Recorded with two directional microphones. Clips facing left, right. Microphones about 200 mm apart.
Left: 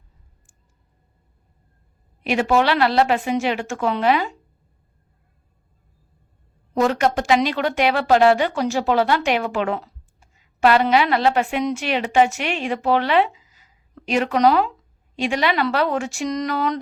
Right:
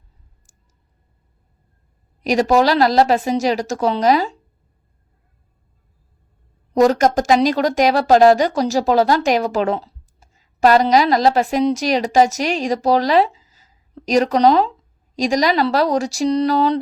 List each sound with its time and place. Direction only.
2.2 s speech: 40° right (ahead or behind)
6.7 s speech: 40° right (ahead or behind)